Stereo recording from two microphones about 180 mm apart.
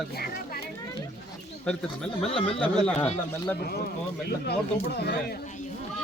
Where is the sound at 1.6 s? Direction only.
5° left (ahead or behind).